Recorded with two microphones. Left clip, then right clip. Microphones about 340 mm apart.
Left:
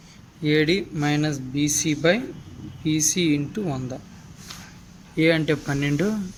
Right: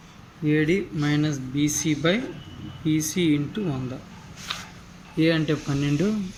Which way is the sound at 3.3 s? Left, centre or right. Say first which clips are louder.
Left 1 dB; left.